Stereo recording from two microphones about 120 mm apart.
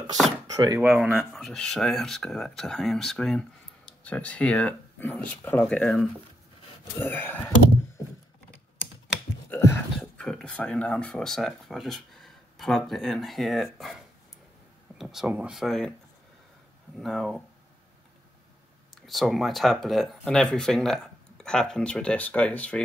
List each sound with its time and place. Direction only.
0.7 s speech: 15° right (ahead or behind); by 6.0 s 5° left (ahead or behind)
7.0 s speech: 15° left (ahead or behind)
9.5 s a sound: 25° left (ahead or behind)
9.9 s speech: 10° left (ahead or behind)
17.0 s speech: centre (ahead or behind)
19.0 s speech: centre (ahead or behind)